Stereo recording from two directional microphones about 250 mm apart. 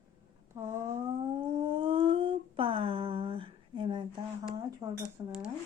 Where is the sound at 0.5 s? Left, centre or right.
Centre.